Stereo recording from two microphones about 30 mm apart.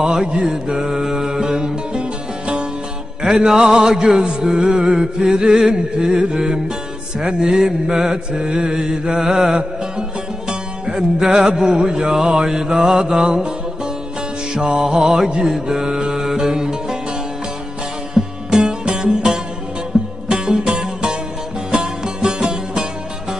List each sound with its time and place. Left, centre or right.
0.0 s music: right
3.2 s music: right
7.8 s mantra: centre
8.4 s music: right; by 9.6 s centre
10.5 s music: right
14.5 s music: right
15.4 s mantra: centre
16.1 s music: centre
18.2 s music: right
18.9 s music: right